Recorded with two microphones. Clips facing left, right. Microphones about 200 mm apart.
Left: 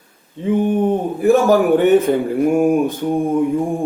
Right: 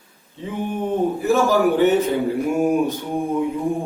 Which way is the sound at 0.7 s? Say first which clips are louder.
Left 4 dB; 55° left (ahead or behind).